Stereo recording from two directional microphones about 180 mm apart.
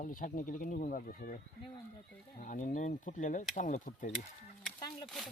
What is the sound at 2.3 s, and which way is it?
Speech, 45° left (ahead or behind).